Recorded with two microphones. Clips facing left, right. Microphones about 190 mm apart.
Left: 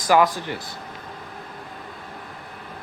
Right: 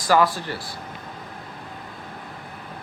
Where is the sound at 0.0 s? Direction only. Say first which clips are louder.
Left 1 dB; 15° left (ahead or behind).